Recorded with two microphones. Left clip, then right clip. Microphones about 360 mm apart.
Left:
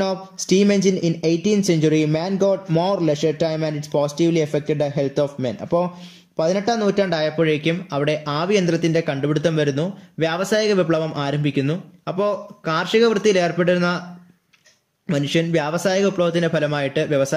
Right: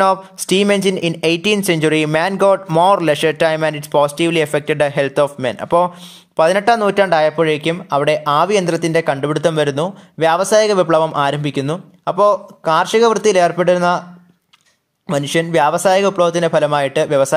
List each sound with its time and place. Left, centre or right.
0.4 s speech: centre
15.0 s speech: centre